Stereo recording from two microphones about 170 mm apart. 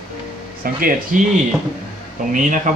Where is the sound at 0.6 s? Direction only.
55° right (ahead or behind).